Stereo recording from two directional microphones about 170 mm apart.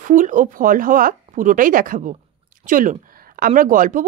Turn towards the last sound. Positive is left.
turn(degrees=-50)  # may be behind; listen again after turning